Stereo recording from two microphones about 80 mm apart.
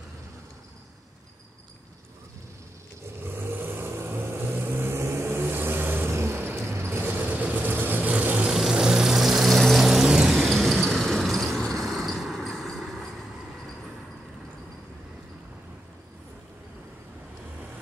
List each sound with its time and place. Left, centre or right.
3.3 s vehicle: right
8.5 s vehicle: centre